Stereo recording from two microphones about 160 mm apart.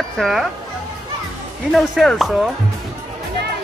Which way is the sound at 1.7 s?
Centre (ahead or behind).